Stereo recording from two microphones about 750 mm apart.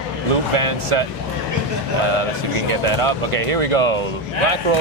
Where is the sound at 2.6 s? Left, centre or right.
Right.